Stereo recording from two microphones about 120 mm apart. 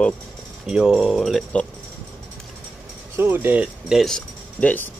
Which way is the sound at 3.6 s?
Centre (ahead or behind).